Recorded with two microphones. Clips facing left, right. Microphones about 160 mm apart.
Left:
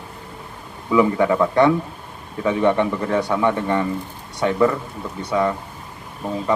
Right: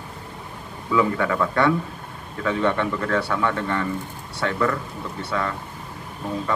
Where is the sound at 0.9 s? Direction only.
20° left (ahead or behind).